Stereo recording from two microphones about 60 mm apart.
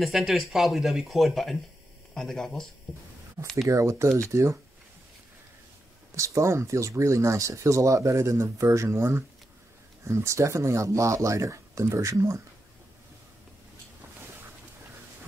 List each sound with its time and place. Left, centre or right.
0.0 s speech: centre
3.6 s speech: right
6.1 s speech: right